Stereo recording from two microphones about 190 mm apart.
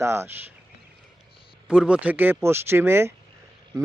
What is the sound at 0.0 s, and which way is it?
Speech, 15° right (ahead or behind).